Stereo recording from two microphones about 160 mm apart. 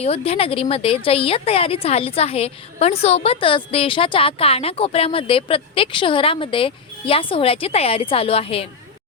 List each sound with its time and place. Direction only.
0.0 s a woman's voice: 40° left (ahead or behind)